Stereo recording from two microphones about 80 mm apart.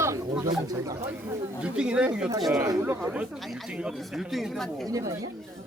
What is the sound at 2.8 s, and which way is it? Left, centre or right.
Speech, right.